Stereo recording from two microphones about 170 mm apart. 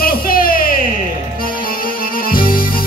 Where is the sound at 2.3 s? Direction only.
60° left (ahead or behind).